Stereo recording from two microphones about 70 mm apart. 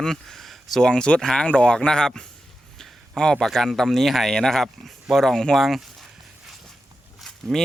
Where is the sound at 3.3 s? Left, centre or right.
Centre.